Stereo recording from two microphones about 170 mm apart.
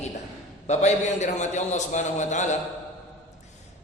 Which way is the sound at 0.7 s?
45° left (ahead or behind).